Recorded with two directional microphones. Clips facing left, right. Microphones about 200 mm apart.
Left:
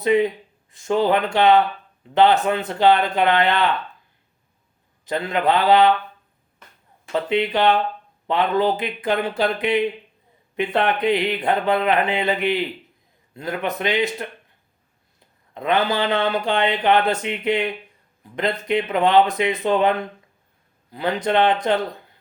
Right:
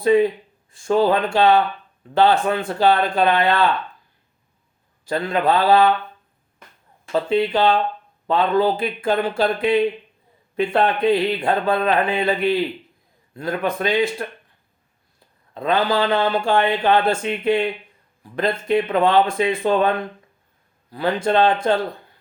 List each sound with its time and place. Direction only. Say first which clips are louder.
0.0 s speech: right 2 dB; 20° left (ahead or behind)
5.0 s speech: right 1 dB; 20° left (ahead or behind)
7.0 s speech: right 2 dB; 20° left (ahead or behind)
15.5 s speech: right 1 dB; 20° left (ahead or behind)
21.2 s speech: right 1 dB; 20° left (ahead or behind)